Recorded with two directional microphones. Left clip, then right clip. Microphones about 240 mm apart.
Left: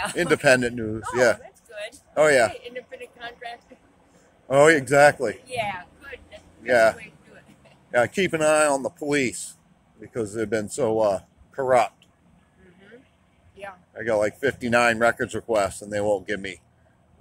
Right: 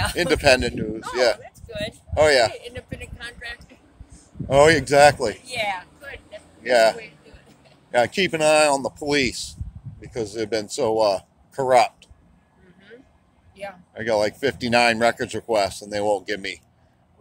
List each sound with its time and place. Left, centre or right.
0.1 s a man's voice: centre
1.4 s a sound: right
2.1 s a man's voice: centre
2.6 s speech: right
4.5 s speech: centre
5.5 s a sound: right
6.6 s speech: centre
13.9 s speech: centre